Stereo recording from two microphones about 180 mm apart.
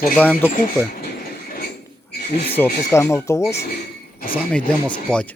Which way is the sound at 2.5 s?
15° left (ahead or behind).